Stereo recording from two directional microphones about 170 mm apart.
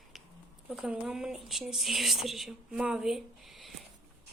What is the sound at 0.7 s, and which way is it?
Speech, 5° right (ahead or behind).